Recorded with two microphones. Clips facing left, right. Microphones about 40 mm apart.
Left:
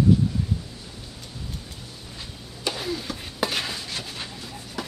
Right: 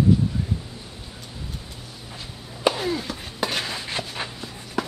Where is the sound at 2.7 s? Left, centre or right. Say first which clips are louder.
Right 4 dB; centre.